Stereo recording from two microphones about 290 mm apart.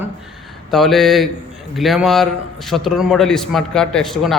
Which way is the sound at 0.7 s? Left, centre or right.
Centre.